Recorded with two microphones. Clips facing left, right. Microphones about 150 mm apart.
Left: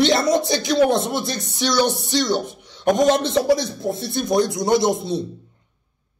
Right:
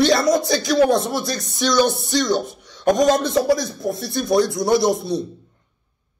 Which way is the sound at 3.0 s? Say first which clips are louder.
Even; 25° left (ahead or behind).